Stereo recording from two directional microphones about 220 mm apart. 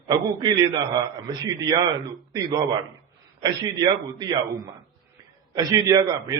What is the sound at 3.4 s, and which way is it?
A man's voice, 20° right (ahead or behind).